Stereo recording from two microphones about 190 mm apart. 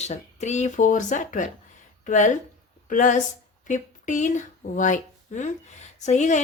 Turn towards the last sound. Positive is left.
turn(degrees=40)  # may be behind; listen again after turning